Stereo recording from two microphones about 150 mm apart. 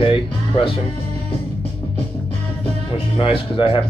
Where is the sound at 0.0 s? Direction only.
35° left (ahead or behind).